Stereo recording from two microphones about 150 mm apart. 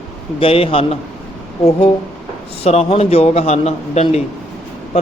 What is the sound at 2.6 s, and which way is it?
A man's voice, 45° left (ahead or behind).